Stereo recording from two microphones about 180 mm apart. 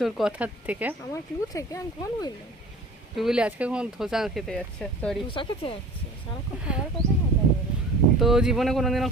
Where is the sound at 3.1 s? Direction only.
5° right (ahead or behind).